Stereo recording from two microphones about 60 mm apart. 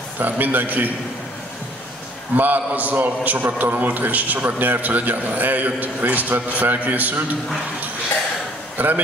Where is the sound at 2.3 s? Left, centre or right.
Right.